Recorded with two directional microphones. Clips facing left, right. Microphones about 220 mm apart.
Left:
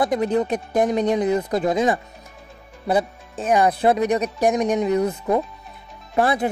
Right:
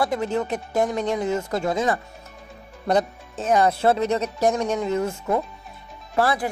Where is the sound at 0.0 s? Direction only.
20° left (ahead or behind).